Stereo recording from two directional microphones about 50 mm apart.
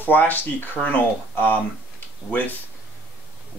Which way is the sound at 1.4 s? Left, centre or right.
Left.